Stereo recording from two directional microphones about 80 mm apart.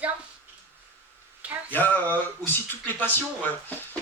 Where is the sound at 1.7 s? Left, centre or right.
Left.